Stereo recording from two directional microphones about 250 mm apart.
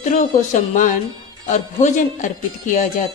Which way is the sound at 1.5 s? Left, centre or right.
Left.